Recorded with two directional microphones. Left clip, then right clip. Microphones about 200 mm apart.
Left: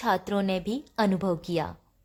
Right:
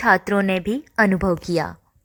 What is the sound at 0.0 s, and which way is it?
A woman's voice, 20° right (ahead or behind).